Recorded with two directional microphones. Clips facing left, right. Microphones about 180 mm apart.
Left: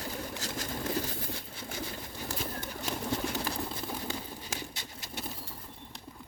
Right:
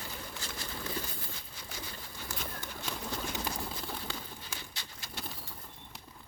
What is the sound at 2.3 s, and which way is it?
Bird, 35° left (ahead or behind).